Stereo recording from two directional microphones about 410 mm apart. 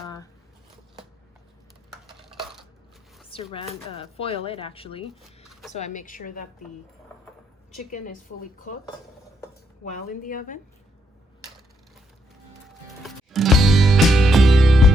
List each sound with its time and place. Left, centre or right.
0.0 s squish: centre
2.3 s coin: centre
3.2 s speech: centre
5.5 s a sound: centre
5.7 s speech: centre
7.9 s speech: centre
9.8 s speech: centre
13.0 s music: centre